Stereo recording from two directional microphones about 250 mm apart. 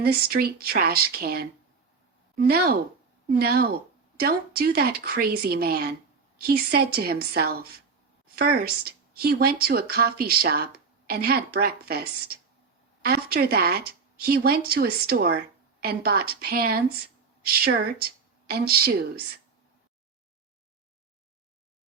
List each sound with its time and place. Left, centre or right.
0.0 s speech: right
3.2 s speech: right